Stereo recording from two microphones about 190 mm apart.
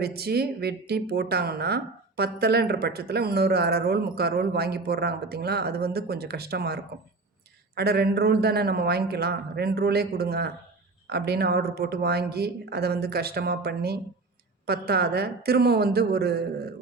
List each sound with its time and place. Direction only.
0.0 s a woman's voice: 55° right (ahead or behind)